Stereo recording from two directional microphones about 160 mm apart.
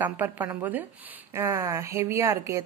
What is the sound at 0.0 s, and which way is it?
Speech, 10° right (ahead or behind).